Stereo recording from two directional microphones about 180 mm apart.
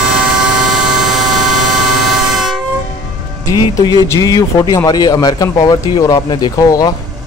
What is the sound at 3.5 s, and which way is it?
Speech, 20° left (ahead or behind).